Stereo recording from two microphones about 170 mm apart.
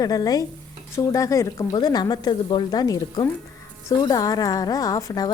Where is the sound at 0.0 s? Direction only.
20° left (ahead or behind).